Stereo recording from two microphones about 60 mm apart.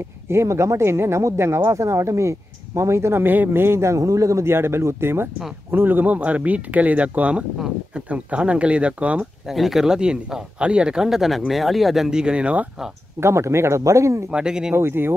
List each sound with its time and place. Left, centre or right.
0.3 s a man's voice: right
3.3 s a man's voice: right
7.5 s speech: centre
8.1 s speech: right
9.2 s speech: centre
13.2 s a man's voice: right
14.3 s speech: centre
14.8 s speech: right